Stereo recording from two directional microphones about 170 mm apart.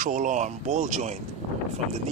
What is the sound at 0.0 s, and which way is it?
Speech, 50° right (ahead or behind).